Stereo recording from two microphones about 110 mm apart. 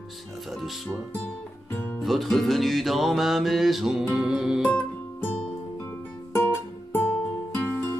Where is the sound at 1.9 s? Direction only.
Centre (ahead or behind).